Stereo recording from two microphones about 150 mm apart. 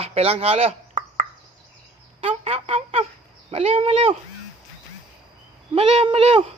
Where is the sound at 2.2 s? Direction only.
40° right (ahead or behind).